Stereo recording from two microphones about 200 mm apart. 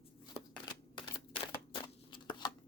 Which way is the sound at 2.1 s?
25° left (ahead or behind).